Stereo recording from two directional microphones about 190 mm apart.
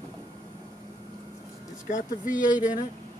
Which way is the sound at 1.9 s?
45° left (ahead or behind).